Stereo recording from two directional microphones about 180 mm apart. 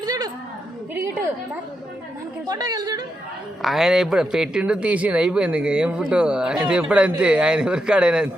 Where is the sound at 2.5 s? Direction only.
20° right (ahead or behind).